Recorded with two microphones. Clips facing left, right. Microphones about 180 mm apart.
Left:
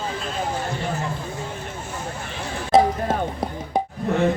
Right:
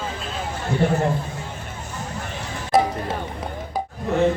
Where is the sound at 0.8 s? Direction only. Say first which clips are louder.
Right 12 dB; 55° right (ahead or behind).